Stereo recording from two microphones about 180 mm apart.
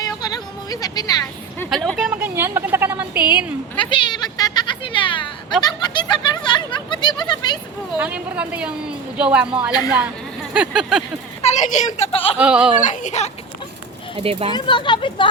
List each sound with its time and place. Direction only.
0.0 s music: 20° left (ahead or behind)
1.7 s a woman's voice: centre (ahead or behind)
3.8 s speech: 25° left (ahead or behind)
7.9 s a woman's voice: 5° right (ahead or behind)
10.5 s a sound: 5° right (ahead or behind)
11.4 s a child's voice: 40° left (ahead or behind)
12.4 s a woman's voice: 5° right (ahead or behind)
12.8 s a child's voice: 45° left (ahead or behind)
14.2 s speech: 30° right (ahead or behind)
14.5 s speech: 25° left (ahead or behind)